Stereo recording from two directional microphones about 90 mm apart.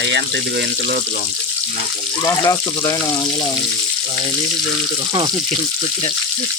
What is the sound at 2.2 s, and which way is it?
Speech, 40° left (ahead or behind).